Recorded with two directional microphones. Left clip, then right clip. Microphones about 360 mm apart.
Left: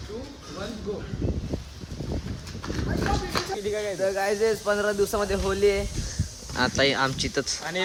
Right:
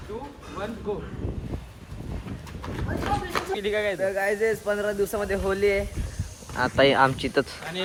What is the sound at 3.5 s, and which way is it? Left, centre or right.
Speech, right.